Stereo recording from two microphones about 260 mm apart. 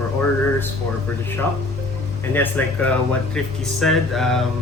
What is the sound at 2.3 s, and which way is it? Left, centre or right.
Speech, centre.